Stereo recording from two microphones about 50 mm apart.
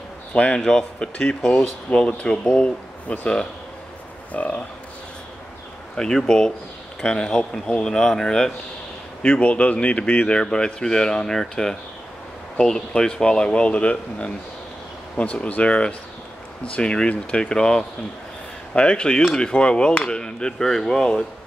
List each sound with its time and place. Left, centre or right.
0.3 s speech: left
0.7 s speech: centre
5.9 s speech: centre
9.2 s speech: left
15.4 s speech: left